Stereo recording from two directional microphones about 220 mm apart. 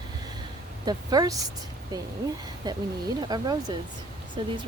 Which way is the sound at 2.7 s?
20° right (ahead or behind).